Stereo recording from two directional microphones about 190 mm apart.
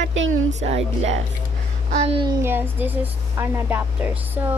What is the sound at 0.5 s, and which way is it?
A woman's voice, 35° right (ahead or behind).